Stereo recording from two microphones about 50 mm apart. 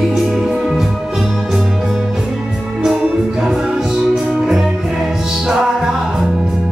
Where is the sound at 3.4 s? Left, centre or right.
Centre.